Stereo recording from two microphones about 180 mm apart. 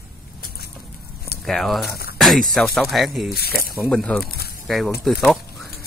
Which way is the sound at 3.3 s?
60° left (ahead or behind).